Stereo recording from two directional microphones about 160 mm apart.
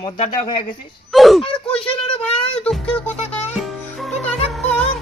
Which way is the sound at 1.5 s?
35° left (ahead or behind).